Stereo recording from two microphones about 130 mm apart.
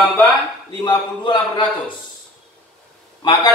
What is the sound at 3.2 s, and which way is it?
Speech, 30° left (ahead or behind).